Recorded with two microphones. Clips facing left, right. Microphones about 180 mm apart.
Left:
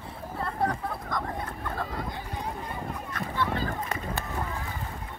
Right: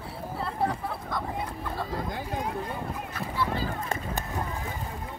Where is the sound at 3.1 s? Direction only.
5° right (ahead or behind).